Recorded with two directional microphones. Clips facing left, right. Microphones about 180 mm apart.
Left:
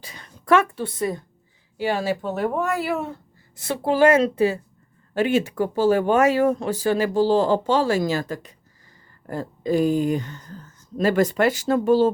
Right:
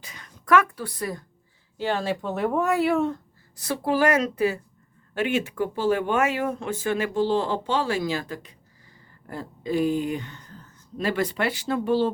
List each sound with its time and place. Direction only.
0.0 s a woman's voice: 30° left (ahead or behind)
1.8 s speech: 10° left (ahead or behind)
3.5 s a woman's voice: 25° left (ahead or behind); by 12.1 s 40° left (ahead or behind)